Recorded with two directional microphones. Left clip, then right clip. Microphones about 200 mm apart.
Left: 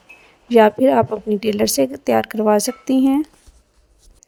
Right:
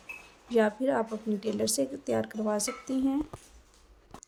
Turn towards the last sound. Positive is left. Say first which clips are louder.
# left 13 dB
turn(degrees=40)  # may be behind; listen again after turning